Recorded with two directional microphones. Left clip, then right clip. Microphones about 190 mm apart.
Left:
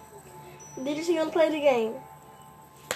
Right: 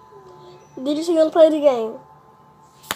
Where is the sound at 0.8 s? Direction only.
25° right (ahead or behind).